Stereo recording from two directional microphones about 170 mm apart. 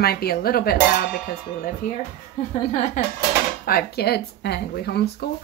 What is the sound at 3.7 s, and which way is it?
Speech, 65° left (ahead or behind).